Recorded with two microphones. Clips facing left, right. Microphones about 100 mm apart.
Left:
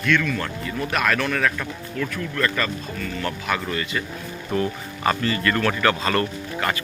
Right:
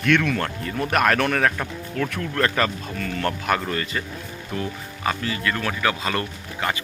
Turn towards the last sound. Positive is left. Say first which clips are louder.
# left 2 dB
turn(degrees=-20)  # may be behind; listen again after turning